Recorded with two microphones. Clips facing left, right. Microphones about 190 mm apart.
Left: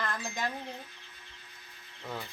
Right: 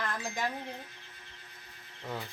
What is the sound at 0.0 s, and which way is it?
Wind chime, 10° right (ahead or behind).